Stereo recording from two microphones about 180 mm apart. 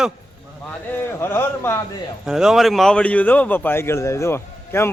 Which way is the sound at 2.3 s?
5° right (ahead or behind).